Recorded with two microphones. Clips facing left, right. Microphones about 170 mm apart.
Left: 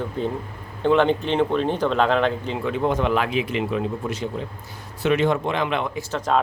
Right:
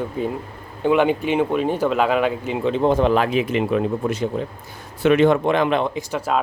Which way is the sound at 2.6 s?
30° right (ahead or behind).